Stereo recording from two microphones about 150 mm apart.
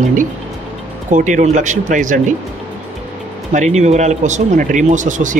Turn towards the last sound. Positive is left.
turn(degrees=-60)  # may be behind; listen again after turning